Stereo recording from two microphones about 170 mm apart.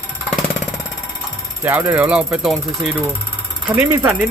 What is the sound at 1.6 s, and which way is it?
Speech, 10° right (ahead or behind).